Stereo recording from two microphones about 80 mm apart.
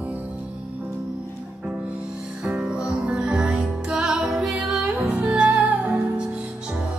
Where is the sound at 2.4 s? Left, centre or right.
Centre.